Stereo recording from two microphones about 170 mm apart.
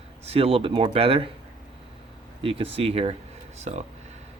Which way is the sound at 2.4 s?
35° right (ahead or behind).